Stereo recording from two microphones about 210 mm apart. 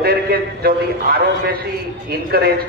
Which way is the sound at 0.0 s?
45° right (ahead or behind).